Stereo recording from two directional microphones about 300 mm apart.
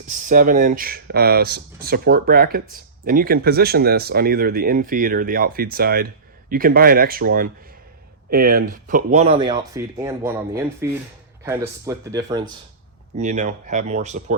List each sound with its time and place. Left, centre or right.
0.1 s speech: right
13.1 s speech: right